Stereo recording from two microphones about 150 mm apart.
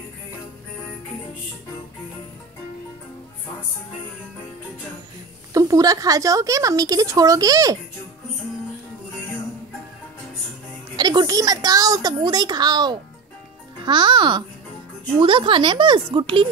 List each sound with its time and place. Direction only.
5.5 s a woman's voice: 25° right (ahead or behind)
11.0 s a woman's voice: 30° right (ahead or behind)